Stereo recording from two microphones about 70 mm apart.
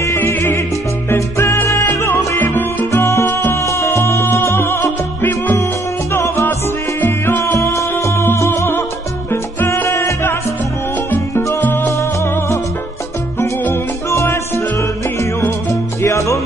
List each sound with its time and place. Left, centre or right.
0.2 s music: left
2.9 s music: left
3.5 s music: left
6.1 s music: left
11.8 s music: left